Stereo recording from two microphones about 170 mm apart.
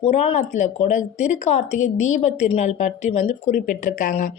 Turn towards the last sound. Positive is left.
turn(degrees=50)  # may be behind; listen again after turning